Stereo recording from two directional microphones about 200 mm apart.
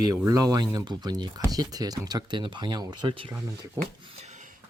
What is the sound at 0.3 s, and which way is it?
Speech, 20° right (ahead or behind).